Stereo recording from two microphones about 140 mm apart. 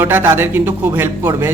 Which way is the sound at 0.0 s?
15° right (ahead or behind).